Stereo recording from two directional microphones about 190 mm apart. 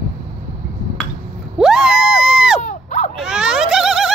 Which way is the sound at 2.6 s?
40° left (ahead or behind).